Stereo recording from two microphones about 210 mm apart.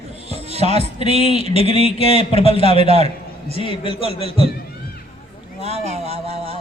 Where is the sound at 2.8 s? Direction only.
30° right (ahead or behind).